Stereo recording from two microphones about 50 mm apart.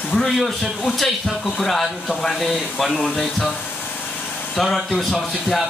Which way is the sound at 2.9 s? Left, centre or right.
Centre.